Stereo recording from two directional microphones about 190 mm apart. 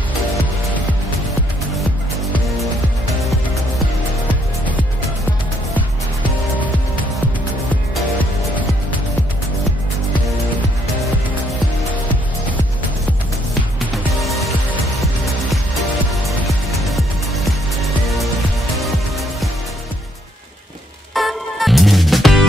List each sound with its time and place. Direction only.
11.9 s music: 10° left (ahead or behind)
13.7 s music: centre (ahead or behind)
16.1 s music: centre (ahead or behind)
21.1 s music: centre (ahead or behind)